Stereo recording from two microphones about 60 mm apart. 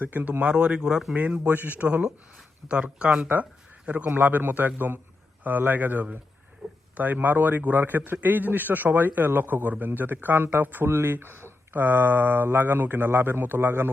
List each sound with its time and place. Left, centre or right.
0.0 s speech: right
1.1 s a man's voice: right